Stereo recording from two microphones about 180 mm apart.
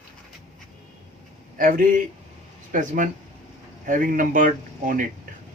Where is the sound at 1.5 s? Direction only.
50° right (ahead or behind).